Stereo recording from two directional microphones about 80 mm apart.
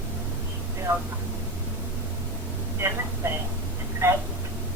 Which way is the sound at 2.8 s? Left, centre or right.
Right.